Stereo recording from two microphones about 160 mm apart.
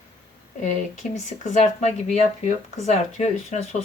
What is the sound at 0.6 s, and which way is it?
Speech, 50° left (ahead or behind).